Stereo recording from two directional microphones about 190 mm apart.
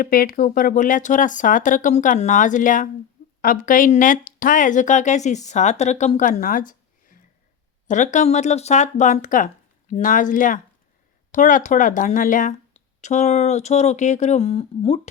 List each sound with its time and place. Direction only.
0.0 s speech: 50° left (ahead or behind); by 15.0 s 35° left (ahead or behind)